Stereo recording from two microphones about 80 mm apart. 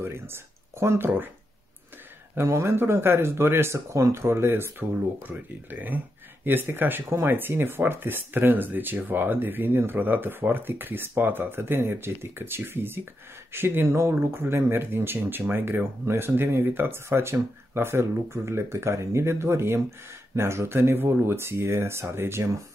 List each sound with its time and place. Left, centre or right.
0.0 s speech: right
2.3 s speech: right